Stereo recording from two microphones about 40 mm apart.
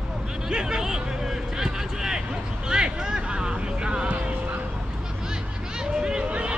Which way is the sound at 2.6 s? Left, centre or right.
Right.